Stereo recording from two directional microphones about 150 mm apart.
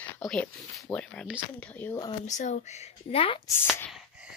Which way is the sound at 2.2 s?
55° left (ahead or behind).